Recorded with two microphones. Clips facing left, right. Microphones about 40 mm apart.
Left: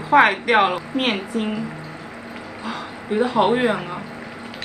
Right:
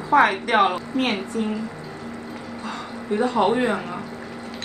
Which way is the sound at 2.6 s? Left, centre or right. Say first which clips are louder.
Left 3 dB; left.